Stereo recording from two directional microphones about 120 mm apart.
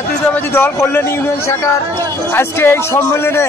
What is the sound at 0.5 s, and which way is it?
A man's voice, 20° left (ahead or behind).